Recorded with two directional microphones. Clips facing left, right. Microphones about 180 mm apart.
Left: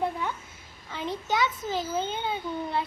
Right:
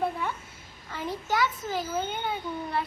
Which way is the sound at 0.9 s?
20° left (ahead or behind).